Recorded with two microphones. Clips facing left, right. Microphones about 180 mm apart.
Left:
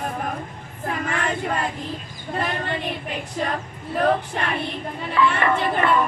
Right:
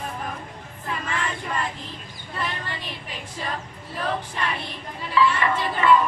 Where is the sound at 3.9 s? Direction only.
55° left (ahead or behind).